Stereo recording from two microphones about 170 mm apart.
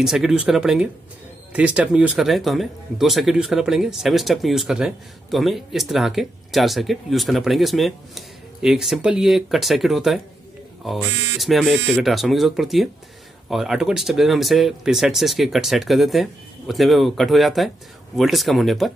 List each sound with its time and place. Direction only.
0.0 s speech: centre (ahead or behind)